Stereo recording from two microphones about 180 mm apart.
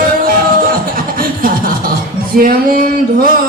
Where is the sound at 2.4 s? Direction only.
55° right (ahead or behind).